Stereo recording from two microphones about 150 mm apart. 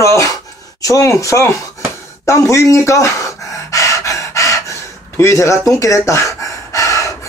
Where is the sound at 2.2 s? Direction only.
20° left (ahead or behind).